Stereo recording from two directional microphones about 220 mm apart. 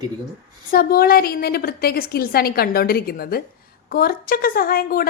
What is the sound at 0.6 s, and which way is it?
A woman's voice, 40° left (ahead or behind).